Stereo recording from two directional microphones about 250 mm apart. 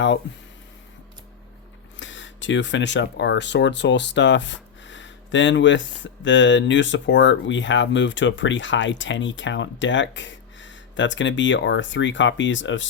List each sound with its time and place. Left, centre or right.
2.0 s speech: left